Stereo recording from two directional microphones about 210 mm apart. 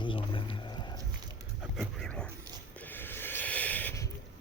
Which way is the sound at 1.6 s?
Centre (ahead or behind).